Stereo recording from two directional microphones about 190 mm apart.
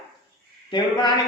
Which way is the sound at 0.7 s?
20° left (ahead or behind).